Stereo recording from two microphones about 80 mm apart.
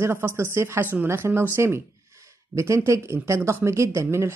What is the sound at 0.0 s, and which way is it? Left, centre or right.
Speech, right.